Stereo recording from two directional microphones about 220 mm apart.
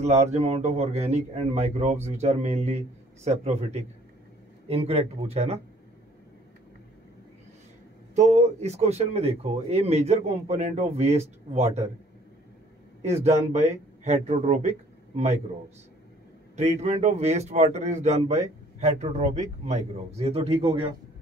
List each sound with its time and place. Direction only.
0.0 s speech: 30° right (ahead or behind)
8.1 s speech: 30° right (ahead or behind)
13.0 s speech: 30° right (ahead or behind)
16.8 s speech: 30° right (ahead or behind)